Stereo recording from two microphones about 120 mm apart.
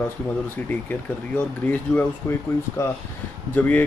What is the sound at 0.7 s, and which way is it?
Speech, 15° left (ahead or behind).